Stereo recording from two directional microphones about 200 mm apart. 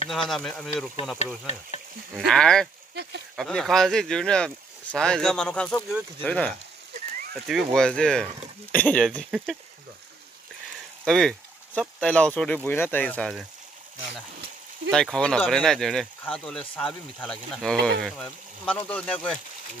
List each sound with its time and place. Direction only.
0.1 s speech: centre (ahead or behind)
2.1 s speech: 5° left (ahead or behind)
2.9 s speech: 55° right (ahead or behind)
3.3 s speech: centre (ahead or behind)
11.1 s speech: 5° left (ahead or behind)
14.9 s speech: 5° left (ahead or behind)